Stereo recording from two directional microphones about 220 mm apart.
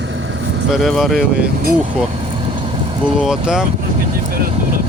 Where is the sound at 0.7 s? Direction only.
Centre (ahead or behind).